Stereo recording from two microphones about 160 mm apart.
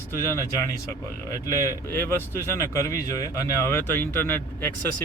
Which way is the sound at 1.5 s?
20° left (ahead or behind).